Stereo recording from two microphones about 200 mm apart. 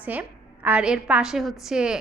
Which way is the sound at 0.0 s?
10° right (ahead or behind).